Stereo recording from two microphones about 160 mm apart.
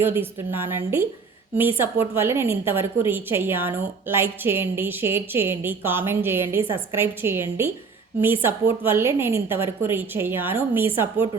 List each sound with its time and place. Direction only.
0.0 s a woman's voice: 15° right (ahead or behind)